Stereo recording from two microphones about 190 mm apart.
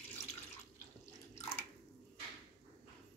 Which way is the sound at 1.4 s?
15° left (ahead or behind).